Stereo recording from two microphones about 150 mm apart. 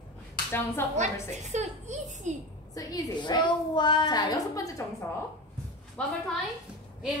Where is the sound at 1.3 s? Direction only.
50° right (ahead or behind).